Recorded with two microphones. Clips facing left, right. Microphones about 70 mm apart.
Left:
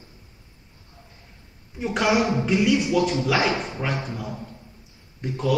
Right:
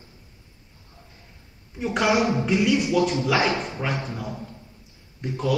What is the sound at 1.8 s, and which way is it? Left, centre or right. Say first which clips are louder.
Speech: even; centre.